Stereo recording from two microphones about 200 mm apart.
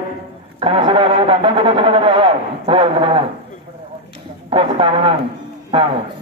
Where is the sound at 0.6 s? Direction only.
25° right (ahead or behind).